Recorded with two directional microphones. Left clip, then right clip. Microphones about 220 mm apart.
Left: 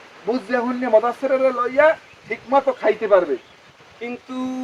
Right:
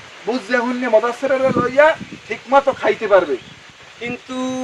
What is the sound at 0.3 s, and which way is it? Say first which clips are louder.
Speech: right 3 dB; 15° right (ahead or behind).